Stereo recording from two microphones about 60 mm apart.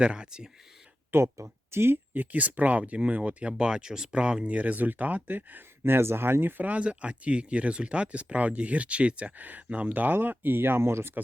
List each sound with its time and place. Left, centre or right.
0.0 s speech: centre
1.1 s speech: right
2.1 s speech: right